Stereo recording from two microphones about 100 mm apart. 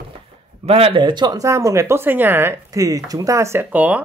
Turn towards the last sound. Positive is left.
turn(degrees=-15)  # may be behind; listen again after turning